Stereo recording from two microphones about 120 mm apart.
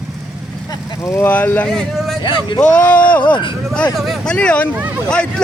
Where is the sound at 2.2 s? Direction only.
40° left (ahead or behind).